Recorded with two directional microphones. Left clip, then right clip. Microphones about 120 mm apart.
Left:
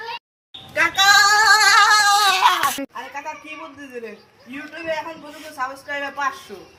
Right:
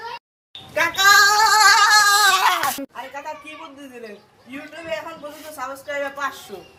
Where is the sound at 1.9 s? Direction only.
40° right (ahead or behind).